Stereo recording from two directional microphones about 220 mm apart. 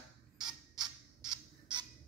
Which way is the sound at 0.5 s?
20° right (ahead or behind).